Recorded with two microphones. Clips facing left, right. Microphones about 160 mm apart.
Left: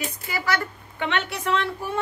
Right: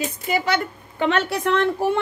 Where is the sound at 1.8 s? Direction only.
80° right.